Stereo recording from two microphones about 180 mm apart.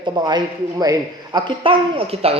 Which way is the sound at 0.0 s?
25° right (ahead or behind).